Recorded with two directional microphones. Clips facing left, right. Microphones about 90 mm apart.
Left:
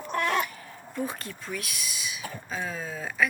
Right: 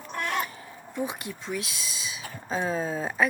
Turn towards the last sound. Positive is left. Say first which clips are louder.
# right 3 dB
turn(degrees=-30)  # may be behind; listen again after turning